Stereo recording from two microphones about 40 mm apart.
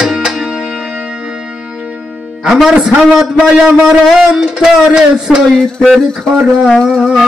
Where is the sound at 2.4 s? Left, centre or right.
Centre.